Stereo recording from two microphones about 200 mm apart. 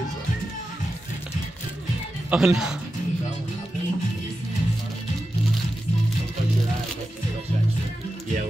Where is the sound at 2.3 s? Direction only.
5° right (ahead or behind).